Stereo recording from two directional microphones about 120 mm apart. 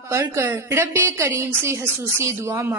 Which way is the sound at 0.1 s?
25° right (ahead or behind).